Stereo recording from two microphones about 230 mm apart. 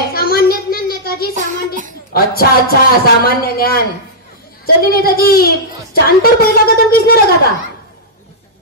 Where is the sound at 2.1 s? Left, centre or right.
Left.